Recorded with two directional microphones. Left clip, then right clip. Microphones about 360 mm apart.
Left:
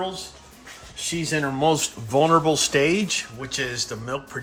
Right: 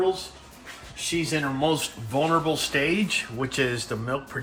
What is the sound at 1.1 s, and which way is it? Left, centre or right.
Speech, left.